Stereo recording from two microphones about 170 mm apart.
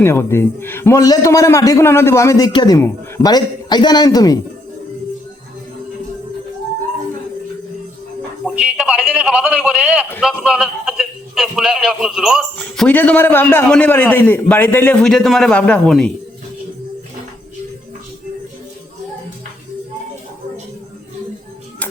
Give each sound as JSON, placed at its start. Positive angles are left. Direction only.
{"t": 0.0, "sound": "a man's voice", "side_deg": 15}
{"t": 8.4, "sound": "a man's voice", "side_deg": -5}